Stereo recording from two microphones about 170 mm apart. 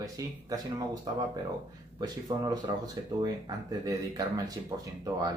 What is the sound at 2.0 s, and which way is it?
Speech, 25° right (ahead or behind).